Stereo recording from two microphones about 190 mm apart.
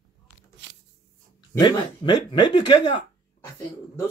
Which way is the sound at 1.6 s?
20° left (ahead or behind).